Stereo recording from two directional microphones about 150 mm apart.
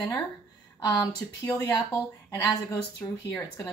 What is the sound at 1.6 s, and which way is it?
Speech, 25° left (ahead or behind).